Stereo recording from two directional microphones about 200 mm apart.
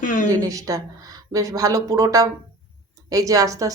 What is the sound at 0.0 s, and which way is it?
Speech, 40° left (ahead or behind).